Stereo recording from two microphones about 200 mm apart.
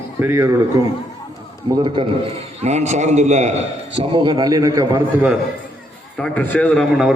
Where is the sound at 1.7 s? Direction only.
25° right (ahead or behind).